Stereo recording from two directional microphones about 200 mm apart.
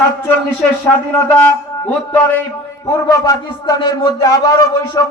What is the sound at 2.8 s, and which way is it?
A man's voice, 15° left (ahead or behind).